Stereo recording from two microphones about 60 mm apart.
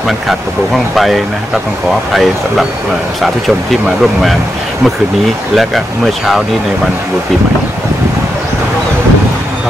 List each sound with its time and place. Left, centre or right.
0.9 s speech: centre
3.2 s speech: centre